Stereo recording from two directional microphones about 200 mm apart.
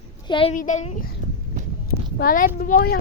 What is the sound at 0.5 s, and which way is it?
Speech, 40° left (ahead or behind).